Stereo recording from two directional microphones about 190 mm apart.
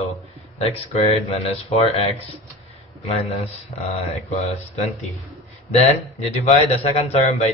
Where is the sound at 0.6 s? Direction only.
35° left (ahead or behind).